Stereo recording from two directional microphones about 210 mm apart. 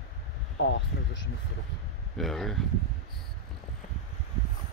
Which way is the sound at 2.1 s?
Centre (ahead or behind).